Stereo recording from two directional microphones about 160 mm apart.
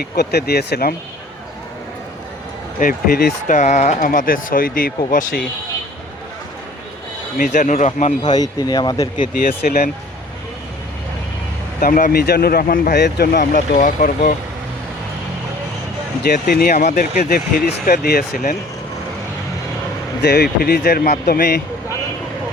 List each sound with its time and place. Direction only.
0.0 s speech: 90° left
2.7 s speech: 55° left (ahead or behind)
7.3 s speech: 55° left (ahead or behind)
8.2 s speech: 25° left (ahead or behind)
9.1 s speech: 60° left (ahead or behind)
9.6 s speech: 75° left (ahead or behind)
11.8 s speech: 55° left (ahead or behind)
12.2 s speech: 80° left; by 14.3 s 55° left (ahead or behind)
16.3 s speech: 70° left (ahead or behind)
16.7 s speech: 55° left (ahead or behind)
20.2 s speech: 85° left